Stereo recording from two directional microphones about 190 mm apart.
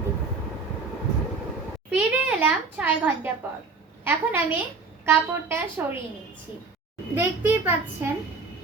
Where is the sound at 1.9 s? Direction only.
10° right (ahead or behind).